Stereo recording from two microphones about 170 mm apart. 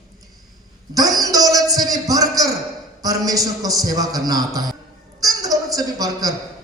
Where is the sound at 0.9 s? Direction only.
20° right (ahead or behind).